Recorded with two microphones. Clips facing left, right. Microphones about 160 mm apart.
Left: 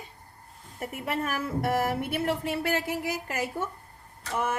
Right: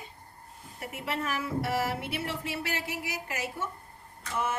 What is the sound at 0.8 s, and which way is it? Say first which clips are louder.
A woman's voice: left 3 dB; 50° left (ahead or behind).